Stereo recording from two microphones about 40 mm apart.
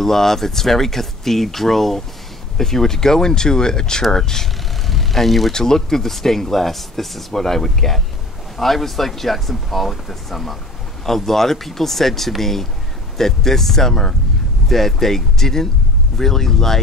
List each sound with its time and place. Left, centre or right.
0.0 s speech: centre